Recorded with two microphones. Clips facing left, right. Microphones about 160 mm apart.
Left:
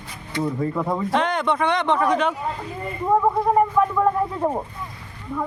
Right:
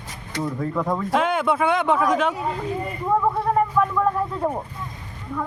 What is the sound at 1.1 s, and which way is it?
Speech, 5° right (ahead or behind).